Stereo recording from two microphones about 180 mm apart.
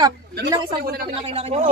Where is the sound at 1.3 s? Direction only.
35° right (ahead or behind).